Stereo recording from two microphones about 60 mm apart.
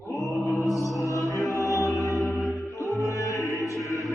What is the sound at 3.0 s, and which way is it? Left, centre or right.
Music, left.